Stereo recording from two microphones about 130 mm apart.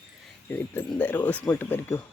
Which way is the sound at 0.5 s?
15° left (ahead or behind).